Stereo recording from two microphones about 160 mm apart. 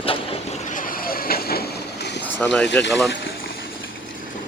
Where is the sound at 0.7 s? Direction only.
60° left (ahead or behind); by 2.2 s 85° left.